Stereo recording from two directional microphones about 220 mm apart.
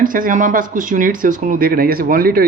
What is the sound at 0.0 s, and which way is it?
Speech, 40° right (ahead or behind).